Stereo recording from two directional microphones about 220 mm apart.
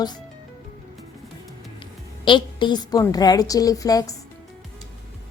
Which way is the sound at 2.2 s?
20° left (ahead or behind).